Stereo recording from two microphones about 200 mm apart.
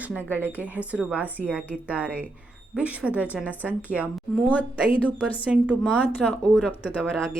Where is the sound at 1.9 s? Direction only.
5° right (ahead or behind).